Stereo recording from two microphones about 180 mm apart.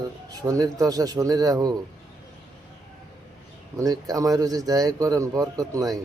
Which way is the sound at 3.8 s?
20° right (ahead or behind).